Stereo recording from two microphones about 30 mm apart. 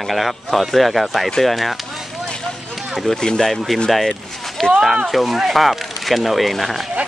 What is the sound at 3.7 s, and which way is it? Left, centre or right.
Speech, centre.